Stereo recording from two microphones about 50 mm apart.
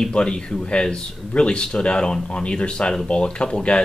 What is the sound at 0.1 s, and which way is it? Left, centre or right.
Speech, centre.